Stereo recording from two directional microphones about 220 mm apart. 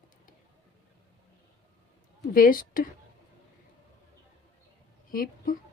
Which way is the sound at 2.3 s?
40° left (ahead or behind).